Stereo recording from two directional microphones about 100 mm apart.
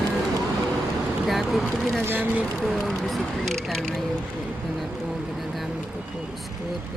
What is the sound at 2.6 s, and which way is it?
Speech, 5° left (ahead or behind).